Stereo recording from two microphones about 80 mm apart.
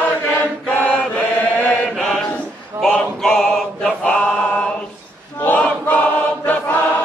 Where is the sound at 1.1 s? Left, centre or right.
Centre.